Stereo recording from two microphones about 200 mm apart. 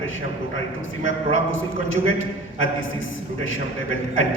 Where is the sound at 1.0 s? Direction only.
75° left (ahead or behind).